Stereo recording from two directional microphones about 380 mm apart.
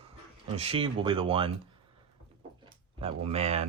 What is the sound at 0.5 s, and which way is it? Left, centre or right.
Speech, centre.